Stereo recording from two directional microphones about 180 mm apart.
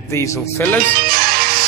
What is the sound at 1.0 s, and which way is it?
Music, 55° right (ahead or behind).